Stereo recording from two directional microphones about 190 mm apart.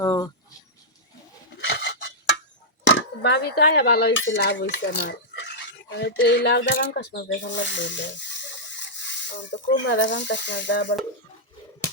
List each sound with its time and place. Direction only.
0.0 s speech: 15° left (ahead or behind)
1.6 s a sound: 55° left (ahead or behind)
2.8 s speech: 70° left (ahead or behind)
4.4 s speech: 65° left (ahead or behind)
8.7 s a sound: 75° left (ahead or behind)
9.9 s speech: 70° left (ahead or behind)